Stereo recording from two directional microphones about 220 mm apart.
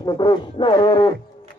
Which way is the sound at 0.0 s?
20° left (ahead or behind).